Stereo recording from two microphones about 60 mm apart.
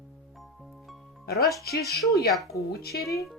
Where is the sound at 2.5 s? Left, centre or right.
Left.